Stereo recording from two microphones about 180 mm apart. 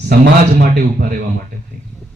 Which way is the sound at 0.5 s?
50° right (ahead or behind).